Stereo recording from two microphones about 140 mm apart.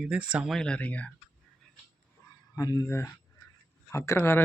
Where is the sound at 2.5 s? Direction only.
25° left (ahead or behind).